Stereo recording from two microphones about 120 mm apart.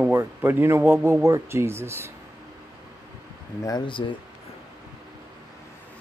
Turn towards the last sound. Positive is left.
turn(degrees=45)  # may be behind; listen again after turning